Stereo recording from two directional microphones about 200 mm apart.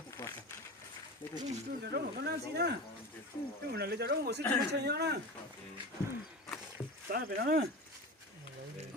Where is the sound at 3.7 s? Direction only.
55° right (ahead or behind).